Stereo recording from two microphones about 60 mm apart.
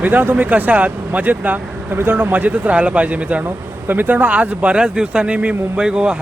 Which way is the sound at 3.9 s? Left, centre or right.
Right.